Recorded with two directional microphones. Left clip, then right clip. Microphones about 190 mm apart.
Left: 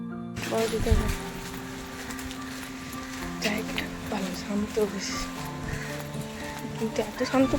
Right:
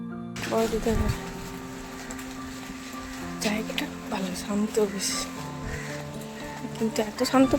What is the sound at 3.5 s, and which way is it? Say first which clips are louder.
Music: right 1 dB; 15° right (ahead or behind).